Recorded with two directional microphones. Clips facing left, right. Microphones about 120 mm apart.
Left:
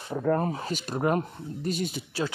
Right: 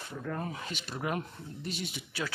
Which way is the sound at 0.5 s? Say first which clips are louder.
Left 8 dB; 40° left (ahead or behind).